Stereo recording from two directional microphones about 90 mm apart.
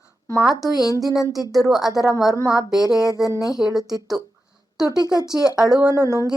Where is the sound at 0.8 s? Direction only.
40° left (ahead or behind).